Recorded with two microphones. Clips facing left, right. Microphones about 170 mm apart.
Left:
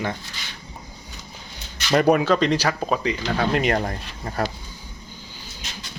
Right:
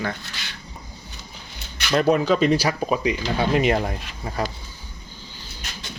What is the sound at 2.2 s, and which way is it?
Speech, 5° right (ahead or behind).